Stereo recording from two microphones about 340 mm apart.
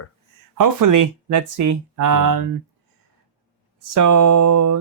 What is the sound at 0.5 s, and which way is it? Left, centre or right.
Speech, right.